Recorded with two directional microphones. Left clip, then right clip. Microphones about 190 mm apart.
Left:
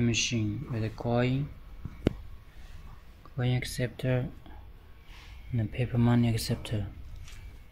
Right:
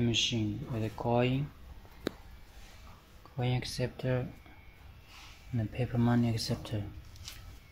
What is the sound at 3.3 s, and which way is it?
Speech, 20° left (ahead or behind).